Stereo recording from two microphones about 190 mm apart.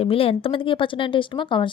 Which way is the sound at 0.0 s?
30° left (ahead or behind).